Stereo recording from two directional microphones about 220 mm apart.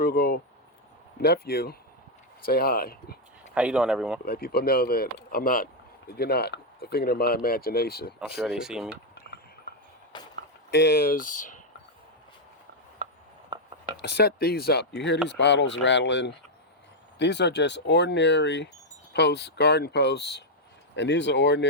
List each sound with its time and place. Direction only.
0.0 s speech: 45° left (ahead or behind)
3.5 s speech: 5° right (ahead or behind)
4.3 s speech: 45° left (ahead or behind)
8.4 s speech: centre (ahead or behind)
10.1 s a sound: 20° left (ahead or behind)
10.7 s speech: 50° left (ahead or behind)
13.0 s a sound: 35° right (ahead or behind)
13.5 s a sound: 20° right (ahead or behind)
13.9 s speech: 50° left (ahead or behind)